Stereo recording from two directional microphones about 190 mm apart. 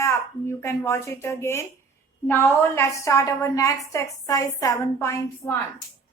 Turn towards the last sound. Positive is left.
turn(degrees=0)  # may be behind; listen again after turning